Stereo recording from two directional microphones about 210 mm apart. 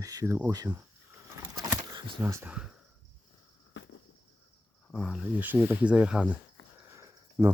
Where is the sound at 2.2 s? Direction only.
10° right (ahead or behind).